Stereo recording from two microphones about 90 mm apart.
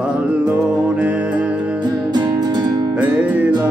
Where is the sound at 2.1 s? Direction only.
50° right (ahead or behind).